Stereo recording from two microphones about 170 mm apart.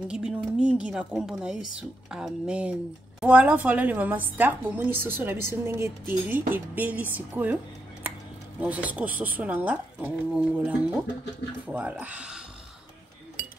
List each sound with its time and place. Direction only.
0.1 s a woman's voice: 5° right (ahead or behind)
8.5 s a woman's voice: 10° right (ahead or behind)